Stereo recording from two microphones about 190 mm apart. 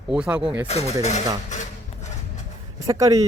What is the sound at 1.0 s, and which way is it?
Dishes, 35° left (ahead or behind).